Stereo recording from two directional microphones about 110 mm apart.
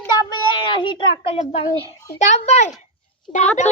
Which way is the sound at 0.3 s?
45° left (ahead or behind).